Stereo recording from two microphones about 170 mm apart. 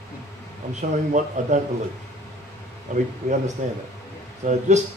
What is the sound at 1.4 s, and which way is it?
Speech, 45° right (ahead or behind).